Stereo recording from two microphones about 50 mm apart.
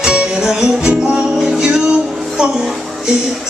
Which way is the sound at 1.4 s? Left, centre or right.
Centre.